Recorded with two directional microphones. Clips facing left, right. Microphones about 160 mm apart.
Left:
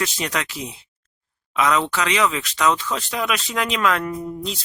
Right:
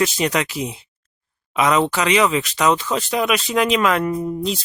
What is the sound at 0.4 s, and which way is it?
Speech, 10° right (ahead or behind).